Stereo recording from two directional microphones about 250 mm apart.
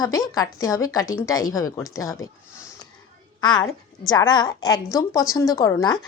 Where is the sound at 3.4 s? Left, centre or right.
Centre.